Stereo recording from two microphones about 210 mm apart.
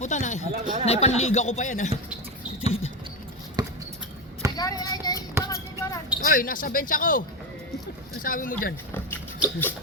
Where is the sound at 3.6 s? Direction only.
20° right (ahead or behind).